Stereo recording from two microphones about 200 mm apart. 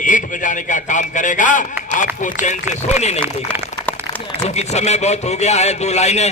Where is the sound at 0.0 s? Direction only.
40° left (ahead or behind).